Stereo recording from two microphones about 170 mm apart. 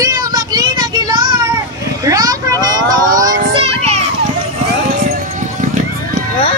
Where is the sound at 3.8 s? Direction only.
35° right (ahead or behind).